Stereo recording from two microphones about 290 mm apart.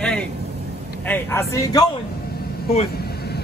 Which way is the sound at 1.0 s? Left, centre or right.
Centre.